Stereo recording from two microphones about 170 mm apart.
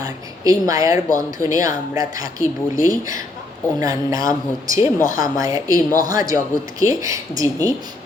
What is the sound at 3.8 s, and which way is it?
Speech, 20° right (ahead or behind).